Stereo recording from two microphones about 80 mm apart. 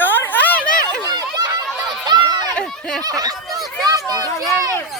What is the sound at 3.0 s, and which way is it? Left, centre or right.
Snicker, right.